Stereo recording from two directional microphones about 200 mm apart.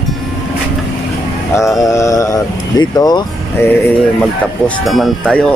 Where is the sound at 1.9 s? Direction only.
15° left (ahead or behind).